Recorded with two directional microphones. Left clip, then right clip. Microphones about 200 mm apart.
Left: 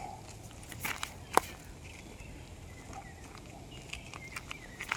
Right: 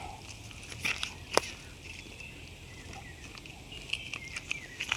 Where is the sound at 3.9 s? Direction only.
15° left (ahead or behind).